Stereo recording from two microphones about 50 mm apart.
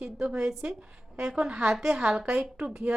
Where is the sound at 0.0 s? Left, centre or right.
Centre.